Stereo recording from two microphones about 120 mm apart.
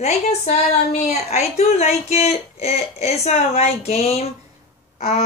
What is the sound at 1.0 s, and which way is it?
Speech, 65° left (ahead or behind).